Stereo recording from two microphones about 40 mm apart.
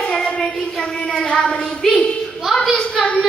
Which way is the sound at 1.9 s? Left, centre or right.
Left.